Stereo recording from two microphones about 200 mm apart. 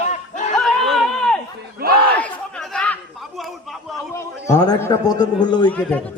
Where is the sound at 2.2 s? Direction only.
5° left (ahead or behind).